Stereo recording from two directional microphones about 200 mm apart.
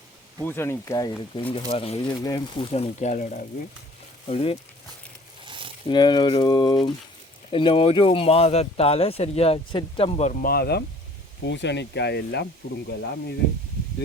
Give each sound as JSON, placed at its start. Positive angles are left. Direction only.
{"t": 0.4, "sound": "speech", "side_deg": 10}
{"t": 1.5, "sound": "speech", "side_deg": 30}
{"t": 4.3, "sound": "speech", "side_deg": 30}
{"t": 5.5, "sound": "a sound", "side_deg": -25}
{"t": 5.9, "sound": "speech", "side_deg": 20}